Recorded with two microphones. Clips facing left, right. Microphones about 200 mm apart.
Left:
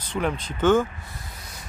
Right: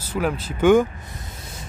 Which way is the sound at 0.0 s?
5° right (ahead or behind).